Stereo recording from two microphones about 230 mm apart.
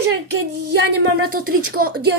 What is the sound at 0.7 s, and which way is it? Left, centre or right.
Speech, right.